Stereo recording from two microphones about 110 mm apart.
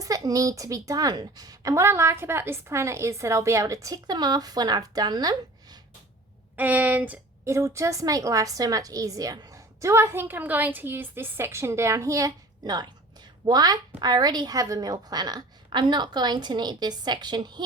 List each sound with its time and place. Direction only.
0.0 s a woman's voice: 30° right (ahead or behind)
6.6 s speech: 15° right (ahead or behind)
7.4 s a woman's voice: 25° right (ahead or behind); by 17.6 s 40° right (ahead or behind)